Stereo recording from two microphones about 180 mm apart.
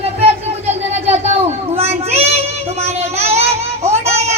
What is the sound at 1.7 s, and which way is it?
Child singing, 35° right (ahead or behind).